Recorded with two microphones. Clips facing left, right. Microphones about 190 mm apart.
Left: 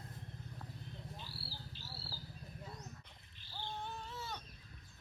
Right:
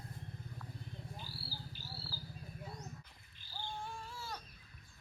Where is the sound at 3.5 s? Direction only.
Centre (ahead or behind).